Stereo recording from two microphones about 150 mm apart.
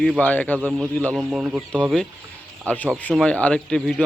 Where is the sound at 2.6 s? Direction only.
10° left (ahead or behind).